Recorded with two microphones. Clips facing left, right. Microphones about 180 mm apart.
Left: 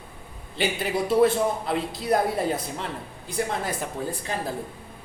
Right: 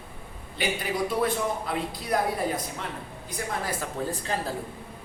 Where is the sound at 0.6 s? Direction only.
25° left (ahead or behind).